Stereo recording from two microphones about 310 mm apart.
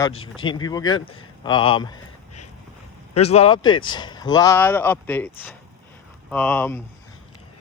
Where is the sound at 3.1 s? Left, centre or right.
Centre.